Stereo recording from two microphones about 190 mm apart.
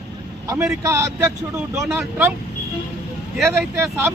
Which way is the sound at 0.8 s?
15° right (ahead or behind).